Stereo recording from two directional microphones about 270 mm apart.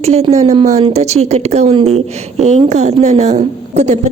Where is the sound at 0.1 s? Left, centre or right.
Right.